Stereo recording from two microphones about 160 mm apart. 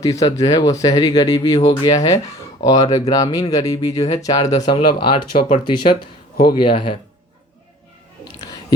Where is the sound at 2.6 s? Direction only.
20° left (ahead or behind).